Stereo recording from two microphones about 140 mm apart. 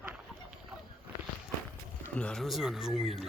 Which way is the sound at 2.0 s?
10° left (ahead or behind).